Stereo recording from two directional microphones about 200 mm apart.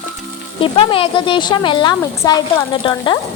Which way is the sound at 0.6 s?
25° left (ahead or behind).